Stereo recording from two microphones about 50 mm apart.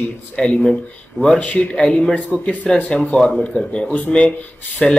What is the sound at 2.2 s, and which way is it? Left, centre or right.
A man's voice, left.